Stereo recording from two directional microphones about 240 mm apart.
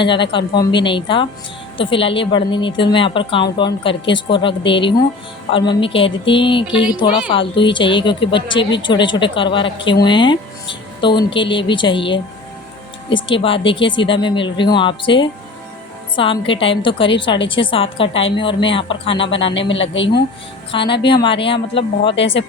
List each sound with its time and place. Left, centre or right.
0.0 s a woman's voice: centre
18.1 s speech: left
18.7 s a woman's voice: left
19.5 s speech: left
20.7 s a woman's voice: left